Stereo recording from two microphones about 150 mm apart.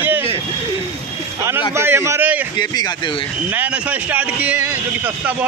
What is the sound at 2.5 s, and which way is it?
Speech, 30° left (ahead or behind).